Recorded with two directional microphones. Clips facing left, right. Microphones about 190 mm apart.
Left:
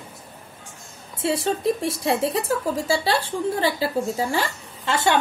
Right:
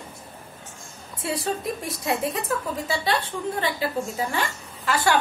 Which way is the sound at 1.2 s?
25° left (ahead or behind).